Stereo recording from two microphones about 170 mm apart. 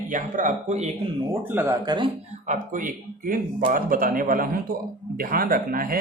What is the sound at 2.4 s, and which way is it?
Speech, 50° right (ahead or behind).